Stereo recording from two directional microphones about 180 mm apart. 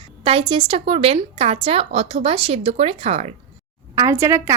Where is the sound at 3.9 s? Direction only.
15° right (ahead or behind).